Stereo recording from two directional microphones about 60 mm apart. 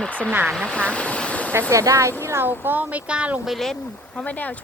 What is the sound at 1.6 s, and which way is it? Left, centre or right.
Speech, right.